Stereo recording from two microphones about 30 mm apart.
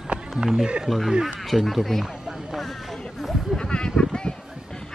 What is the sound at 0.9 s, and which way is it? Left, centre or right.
Speech, centre.